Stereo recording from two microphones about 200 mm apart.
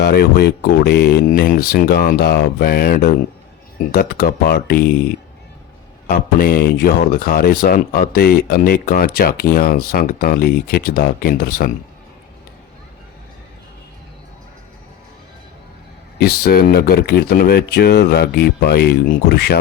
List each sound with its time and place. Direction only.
0.0 s speech: 55° left (ahead or behind)
6.1 s speech: 45° left (ahead or behind)
16.1 s speech: 50° left (ahead or behind)